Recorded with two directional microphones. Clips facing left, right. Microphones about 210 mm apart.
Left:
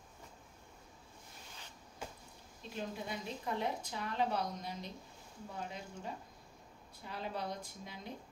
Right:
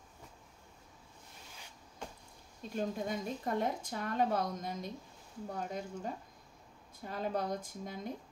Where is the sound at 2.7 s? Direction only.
45° right (ahead or behind).